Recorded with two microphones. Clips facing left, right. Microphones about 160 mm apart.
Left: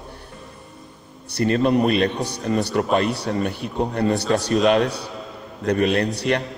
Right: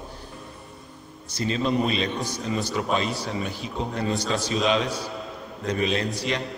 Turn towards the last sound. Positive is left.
turn(degrees=60)  # may be behind; listen again after turning